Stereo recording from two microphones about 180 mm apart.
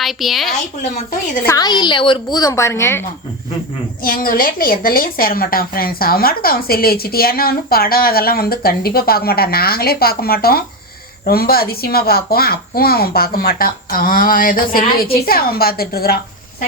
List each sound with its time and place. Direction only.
0.0 s a woman's voice: centre (ahead or behind)
0.8 s speech: 40° left (ahead or behind)
1.5 s a woman's voice: 20° left (ahead or behind)
4.0 s a woman's voice: 55° left (ahead or behind)